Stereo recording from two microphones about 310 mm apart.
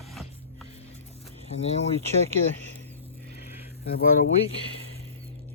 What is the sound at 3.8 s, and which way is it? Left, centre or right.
Speech, left.